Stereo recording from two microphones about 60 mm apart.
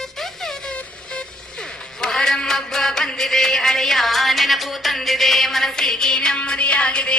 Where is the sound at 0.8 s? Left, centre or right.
Centre.